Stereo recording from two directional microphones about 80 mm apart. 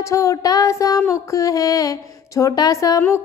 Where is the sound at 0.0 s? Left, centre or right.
Left.